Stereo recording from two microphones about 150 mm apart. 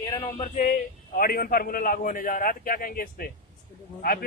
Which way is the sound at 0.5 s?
70° left (ahead or behind).